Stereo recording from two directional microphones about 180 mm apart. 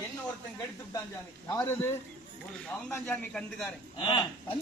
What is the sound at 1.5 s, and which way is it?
Speech, 15° left (ahead or behind).